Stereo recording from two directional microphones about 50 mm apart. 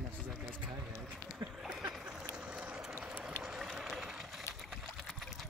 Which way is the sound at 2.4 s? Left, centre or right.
Right.